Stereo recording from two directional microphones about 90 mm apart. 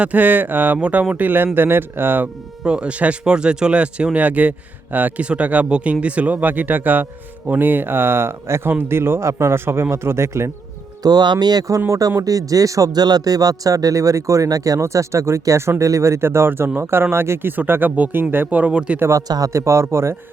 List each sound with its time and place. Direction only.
0.0 s speech: 20° right (ahead or behind)
11.0 s speech: 50° right (ahead or behind); by 18.9 s 10° right (ahead or behind)
18.9 s speech: 30° right (ahead or behind)